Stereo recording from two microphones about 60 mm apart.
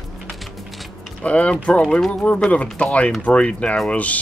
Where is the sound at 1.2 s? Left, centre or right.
Left.